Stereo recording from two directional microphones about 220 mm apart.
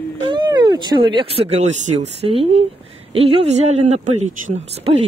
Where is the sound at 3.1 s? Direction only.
25° right (ahead or behind).